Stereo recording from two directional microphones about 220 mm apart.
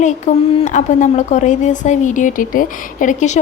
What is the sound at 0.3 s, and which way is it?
A woman's voice, 35° left (ahead or behind).